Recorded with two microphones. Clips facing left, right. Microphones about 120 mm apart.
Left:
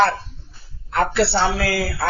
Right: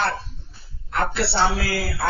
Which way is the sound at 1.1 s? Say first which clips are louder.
Left 2 dB; 65° left (ahead or behind).